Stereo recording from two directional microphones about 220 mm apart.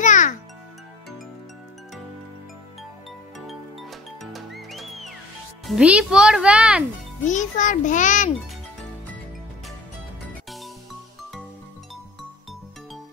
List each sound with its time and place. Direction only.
0.0 s music: 35° left (ahead or behind)
4.2 s music: centre (ahead or behind)
5.7 s a child's voice: 5° right (ahead or behind)
7.2 s a child's voice: 35° left (ahead or behind)